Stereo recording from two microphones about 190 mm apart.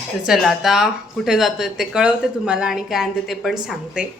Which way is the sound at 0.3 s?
Centre (ahead or behind).